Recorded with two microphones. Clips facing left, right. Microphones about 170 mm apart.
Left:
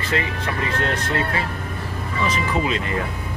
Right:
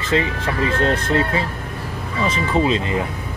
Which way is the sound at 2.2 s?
30° right (ahead or behind).